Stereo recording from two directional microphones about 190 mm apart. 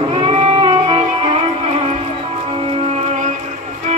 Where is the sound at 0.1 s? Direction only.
30° right (ahead or behind).